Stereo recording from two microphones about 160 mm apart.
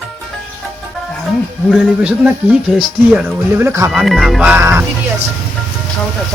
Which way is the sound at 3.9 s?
Centre (ahead or behind).